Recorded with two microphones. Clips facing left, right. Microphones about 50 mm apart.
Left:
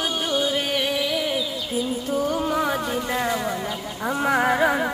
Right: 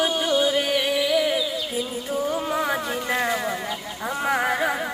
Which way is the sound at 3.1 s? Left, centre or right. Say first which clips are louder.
Right 2 dB; centre.